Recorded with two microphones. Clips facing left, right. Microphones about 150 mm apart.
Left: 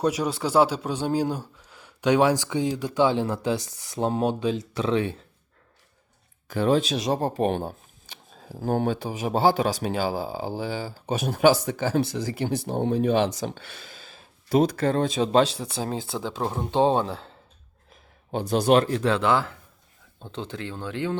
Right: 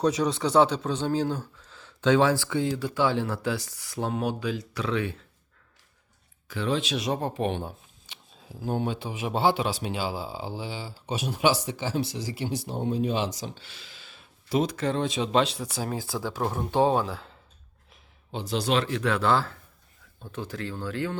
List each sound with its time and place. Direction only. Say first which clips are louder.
0.0 s a man's voice: even; 10° left (ahead or behind); by 5.2 s 30° left (ahead or behind)
6.5 s speech: left 6 dB; 45° left (ahead or behind); by 17.3 s 30° left (ahead or behind)
18.3 s speech: left 7 dB; 50° left (ahead or behind); by 19.2 s 35° left (ahead or behind)
19.2 s a man's voice: left 1 dB; 15° left (ahead or behind)
20.1 s speech: left 1 dB; 25° left (ahead or behind)